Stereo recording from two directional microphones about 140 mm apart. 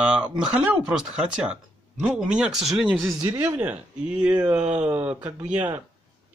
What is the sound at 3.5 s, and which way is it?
Speech, 10° right (ahead or behind).